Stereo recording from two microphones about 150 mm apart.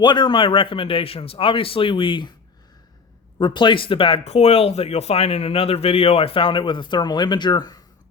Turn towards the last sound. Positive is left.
turn(degrees=30)  # may be behind; listen again after turning